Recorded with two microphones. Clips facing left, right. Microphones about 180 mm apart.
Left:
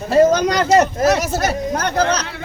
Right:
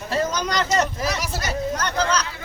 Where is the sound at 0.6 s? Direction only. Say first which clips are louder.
Left 9 dB; 60° left (ahead or behind).